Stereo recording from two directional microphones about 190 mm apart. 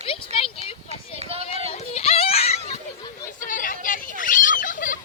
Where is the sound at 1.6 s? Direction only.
35° left (ahead or behind).